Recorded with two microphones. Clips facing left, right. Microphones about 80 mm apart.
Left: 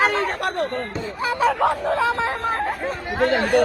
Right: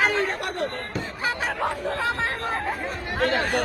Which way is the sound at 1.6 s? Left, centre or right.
Left.